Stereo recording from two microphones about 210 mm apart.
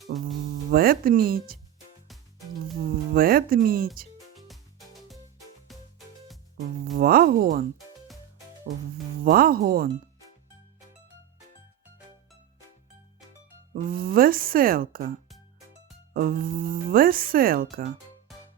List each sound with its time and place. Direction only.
0.0 s speech: centre (ahead or behind)
0.7 s speech: 45° right (ahead or behind)
2.8 s speech: 45° right (ahead or behind)
5.7 s music: centre (ahead or behind)
6.9 s speech: 45° right (ahead or behind)
9.2 s speech: 45° right (ahead or behind)
13.8 s speech: 45° right (ahead or behind)
16.1 s speech: 45° right (ahead or behind)